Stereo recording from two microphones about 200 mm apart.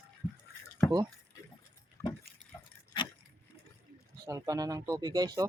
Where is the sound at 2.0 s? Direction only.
15° left (ahead or behind).